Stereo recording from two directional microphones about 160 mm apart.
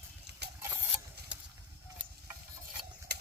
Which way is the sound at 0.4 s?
90° right.